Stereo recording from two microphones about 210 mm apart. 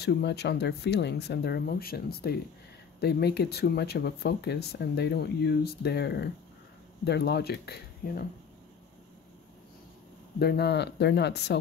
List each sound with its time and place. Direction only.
0.0 s speech: 50° left (ahead or behind)
10.4 s speech: 50° left (ahead or behind)